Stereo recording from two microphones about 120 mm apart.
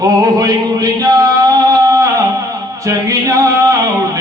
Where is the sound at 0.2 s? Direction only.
30° right (ahead or behind).